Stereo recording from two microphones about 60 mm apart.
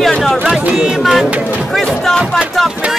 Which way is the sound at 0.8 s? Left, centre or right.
Centre.